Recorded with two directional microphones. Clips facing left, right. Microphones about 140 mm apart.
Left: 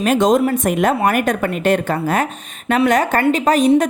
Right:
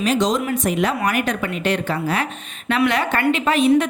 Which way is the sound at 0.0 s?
50° left (ahead or behind).